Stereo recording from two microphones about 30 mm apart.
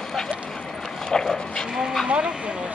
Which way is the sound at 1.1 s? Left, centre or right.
Left.